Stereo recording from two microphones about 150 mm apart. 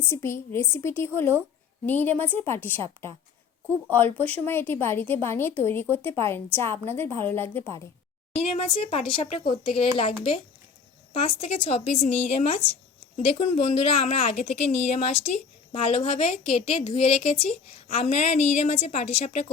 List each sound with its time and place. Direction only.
0.1 s a woman's voice: 15° left (ahead or behind)
8.4 s a woman's voice: 45° left (ahead or behind)